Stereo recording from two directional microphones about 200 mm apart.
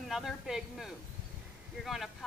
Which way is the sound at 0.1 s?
Centre (ahead or behind).